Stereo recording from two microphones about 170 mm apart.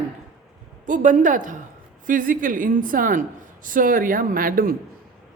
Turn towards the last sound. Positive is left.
turn(degrees=-55)  # may be behind; listen again after turning